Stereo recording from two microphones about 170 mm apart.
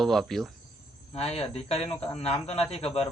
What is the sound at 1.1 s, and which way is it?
Speech, 35° left (ahead or behind).